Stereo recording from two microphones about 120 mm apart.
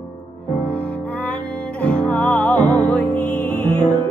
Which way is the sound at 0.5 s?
10° left (ahead or behind).